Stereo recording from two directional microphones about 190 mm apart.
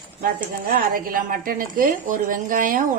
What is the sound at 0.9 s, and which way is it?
Speech, 50° right (ahead or behind).